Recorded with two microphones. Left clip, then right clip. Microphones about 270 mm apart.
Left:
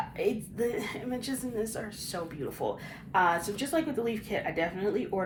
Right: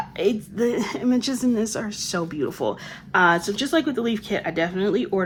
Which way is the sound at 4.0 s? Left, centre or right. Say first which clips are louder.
Right 6 dB; centre.